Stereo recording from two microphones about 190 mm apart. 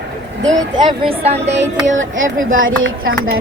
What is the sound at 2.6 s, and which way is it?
Speech, 90° right.